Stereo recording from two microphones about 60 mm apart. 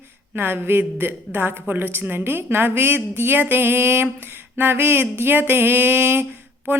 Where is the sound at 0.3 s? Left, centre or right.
Right.